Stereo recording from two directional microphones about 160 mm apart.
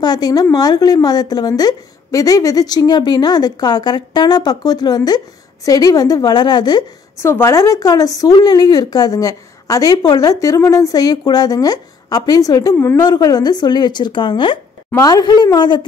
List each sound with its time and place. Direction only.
0.0 s a woman's voice: 25° left (ahead or behind)